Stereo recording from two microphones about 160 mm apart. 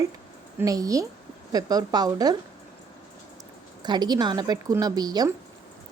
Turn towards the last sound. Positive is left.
turn(degrees=-25)  # may be behind; listen again after turning